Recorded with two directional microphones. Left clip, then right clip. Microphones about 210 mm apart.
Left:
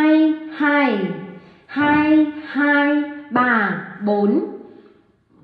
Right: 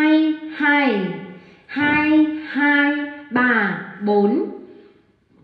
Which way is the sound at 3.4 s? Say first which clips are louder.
Even; centre (ahead or behind).